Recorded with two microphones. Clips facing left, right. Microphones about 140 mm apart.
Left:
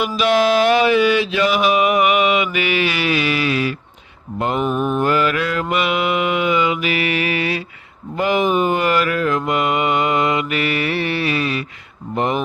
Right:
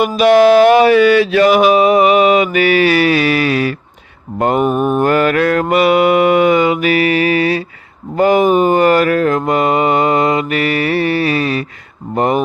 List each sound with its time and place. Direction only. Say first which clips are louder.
0.0 s mantra: right 8 dB; 50° right (ahead or behind)